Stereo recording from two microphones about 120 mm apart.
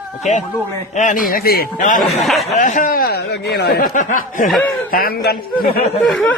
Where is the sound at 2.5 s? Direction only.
90° left.